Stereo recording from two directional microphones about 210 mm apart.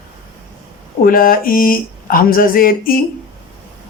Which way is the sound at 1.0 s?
45° left (ahead or behind).